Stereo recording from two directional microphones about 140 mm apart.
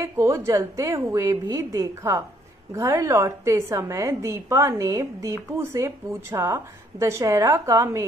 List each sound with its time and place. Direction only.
0.0 s a woman's voice: 20° right (ahead or behind)